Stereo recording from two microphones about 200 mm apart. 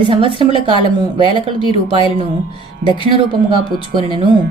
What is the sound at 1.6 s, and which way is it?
Speech, 25° left (ahead or behind).